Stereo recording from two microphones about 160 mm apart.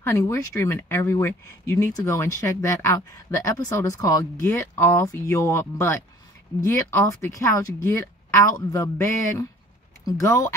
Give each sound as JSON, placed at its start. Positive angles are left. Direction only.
{"t": 0.0, "sound": "speech", "side_deg": 20}